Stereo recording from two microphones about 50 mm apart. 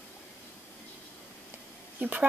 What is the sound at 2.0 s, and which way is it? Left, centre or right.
Speech, right.